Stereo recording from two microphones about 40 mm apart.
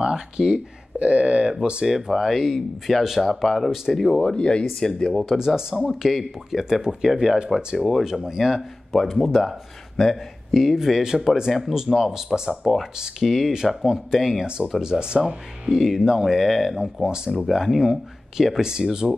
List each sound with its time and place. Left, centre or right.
0.0 s speech: centre
0.9 s speech: right
1.6 s speech: right
2.0 s speech: centre; by 4.6 s left
4.7 s speech: centre
5.6 s speech: centre
5.9 s speech: centre; by 7.4 s right
7.4 s speech: centre
8.0 s speech: centre
8.9 s speech: centre
10.5 s speech: centre
12.6 s speech: centre
14.8 s speech: right
15.6 s speech: centre